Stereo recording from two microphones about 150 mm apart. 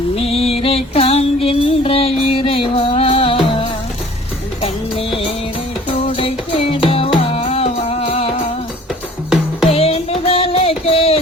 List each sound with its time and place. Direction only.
0.2 s music: 40° left (ahead or behind)
9.6 s music: 40° left (ahead or behind)